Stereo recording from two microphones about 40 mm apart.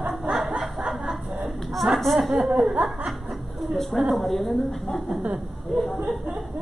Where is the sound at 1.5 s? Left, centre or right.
Centre.